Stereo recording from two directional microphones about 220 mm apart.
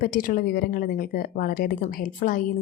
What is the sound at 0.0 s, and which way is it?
A woman's voice, 40° left (ahead or behind).